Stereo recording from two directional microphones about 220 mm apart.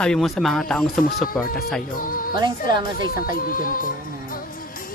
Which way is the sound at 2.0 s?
40° left (ahead or behind).